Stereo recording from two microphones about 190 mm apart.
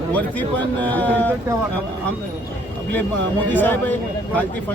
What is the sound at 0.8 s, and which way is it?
Speech, 10° left (ahead or behind).